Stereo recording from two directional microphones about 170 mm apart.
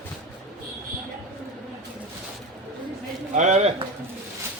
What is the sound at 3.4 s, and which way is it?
Speech, 45° right (ahead or behind).